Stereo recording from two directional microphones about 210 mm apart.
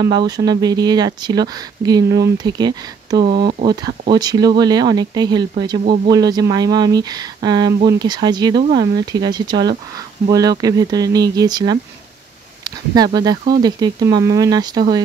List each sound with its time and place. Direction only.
0.5 s speech: 20° right (ahead or behind)
3.3 s speech: 50° right (ahead or behind)
4.1 s speech: 20° right (ahead or behind)